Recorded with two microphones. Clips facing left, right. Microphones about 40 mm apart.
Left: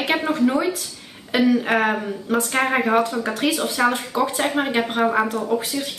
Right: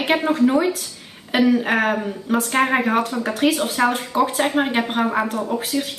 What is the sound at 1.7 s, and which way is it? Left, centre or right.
A woman's voice, centre.